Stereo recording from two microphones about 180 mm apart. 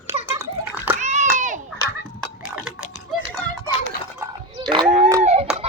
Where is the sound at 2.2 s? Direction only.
5° right (ahead or behind).